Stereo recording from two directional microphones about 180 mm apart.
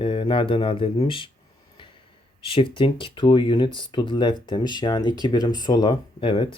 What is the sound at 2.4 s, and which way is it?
Speech, 30° left (ahead or behind).